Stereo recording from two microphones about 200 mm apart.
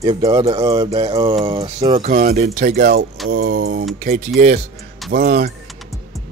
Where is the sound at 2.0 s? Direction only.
45° right (ahead or behind).